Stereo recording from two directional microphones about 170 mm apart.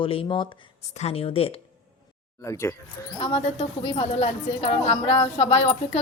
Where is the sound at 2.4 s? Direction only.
15° left (ahead or behind).